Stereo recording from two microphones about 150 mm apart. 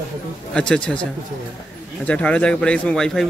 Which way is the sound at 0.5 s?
5° left (ahead or behind).